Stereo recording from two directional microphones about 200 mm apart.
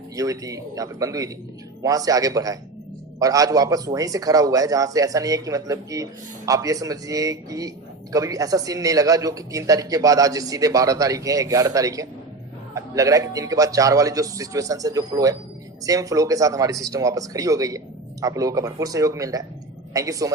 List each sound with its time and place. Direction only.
0.2 s a man's voice: 15° right (ahead or behind)